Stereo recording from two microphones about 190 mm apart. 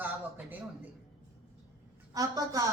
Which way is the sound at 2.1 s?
20° right (ahead or behind).